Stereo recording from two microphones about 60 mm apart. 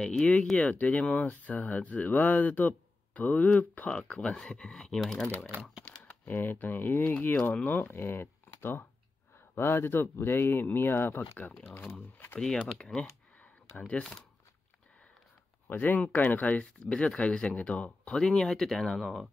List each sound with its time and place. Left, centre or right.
0.0 s speech: centre
0.6 s speech: left
3.9 s speech: centre
5.9 s speech: left
12.7 s speech: centre
15.7 s speech: left; by 19.2 s centre